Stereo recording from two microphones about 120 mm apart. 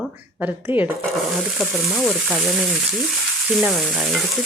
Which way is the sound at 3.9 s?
Centre (ahead or behind).